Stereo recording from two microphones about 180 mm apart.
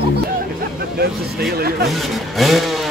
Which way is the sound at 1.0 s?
60° right (ahead or behind).